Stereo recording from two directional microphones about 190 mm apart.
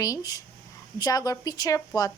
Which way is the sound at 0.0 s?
20° left (ahead or behind).